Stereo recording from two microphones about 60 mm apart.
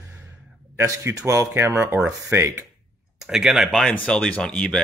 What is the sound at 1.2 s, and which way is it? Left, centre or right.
Speech, right.